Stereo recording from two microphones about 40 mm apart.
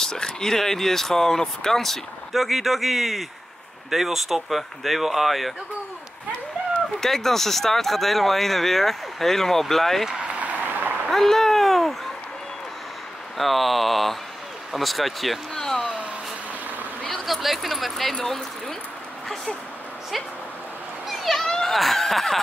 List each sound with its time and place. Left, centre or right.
0.0 s speech: centre
7.0 s speech: centre
10.2 s a sound: right
10.6 s applause: right
11.1 s a sound: centre
13.4 s speech: centre
15.5 s a sound: centre
17.3 s speech: centre
18.2 s speech: centre
21.2 s children playing: centre
21.5 s a sound: centre
21.7 s speech: centre